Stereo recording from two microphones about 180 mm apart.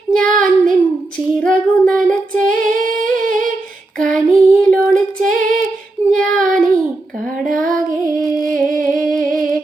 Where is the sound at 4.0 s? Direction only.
5° left (ahead or behind).